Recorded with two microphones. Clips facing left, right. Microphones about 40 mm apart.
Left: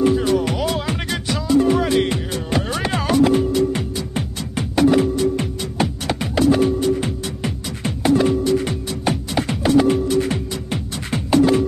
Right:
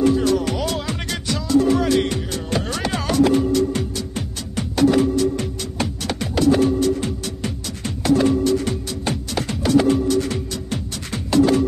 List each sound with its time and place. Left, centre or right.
0.0 s music: left